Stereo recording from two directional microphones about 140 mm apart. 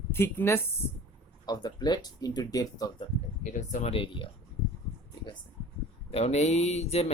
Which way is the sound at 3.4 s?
60° left (ahead or behind).